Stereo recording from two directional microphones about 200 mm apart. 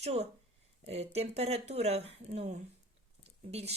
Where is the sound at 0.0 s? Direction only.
30° right (ahead or behind).